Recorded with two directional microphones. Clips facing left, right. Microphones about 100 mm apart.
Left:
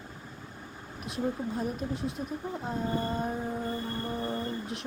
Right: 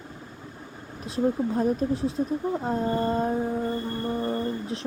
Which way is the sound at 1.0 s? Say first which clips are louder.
Right 7 dB; 30° right (ahead or behind).